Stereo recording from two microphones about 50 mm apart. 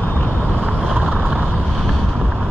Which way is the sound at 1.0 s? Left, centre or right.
Right.